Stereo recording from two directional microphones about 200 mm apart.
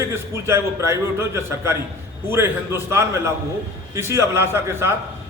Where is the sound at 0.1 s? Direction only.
15° right (ahead or behind).